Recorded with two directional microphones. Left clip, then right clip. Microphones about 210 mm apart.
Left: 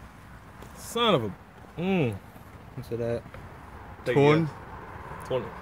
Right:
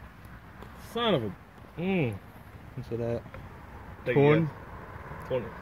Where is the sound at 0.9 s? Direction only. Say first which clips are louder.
Left 4 dB; 50° left (ahead or behind).